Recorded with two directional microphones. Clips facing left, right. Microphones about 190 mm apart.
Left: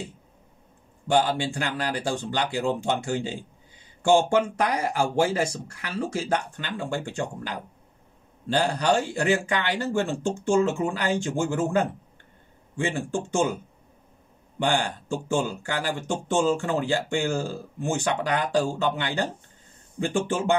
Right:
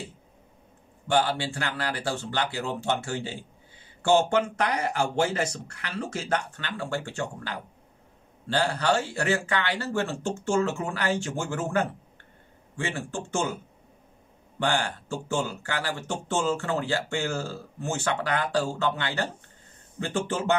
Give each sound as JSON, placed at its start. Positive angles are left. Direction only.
{"t": 1.0, "sound": "speech", "side_deg": 15}
{"t": 14.6, "sound": "speech", "side_deg": 15}